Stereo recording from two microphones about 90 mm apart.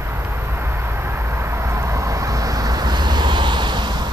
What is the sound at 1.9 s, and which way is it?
Vehicle, 35° right (ahead or behind).